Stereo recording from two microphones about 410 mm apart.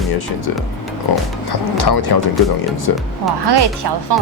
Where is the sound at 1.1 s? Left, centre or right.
Left.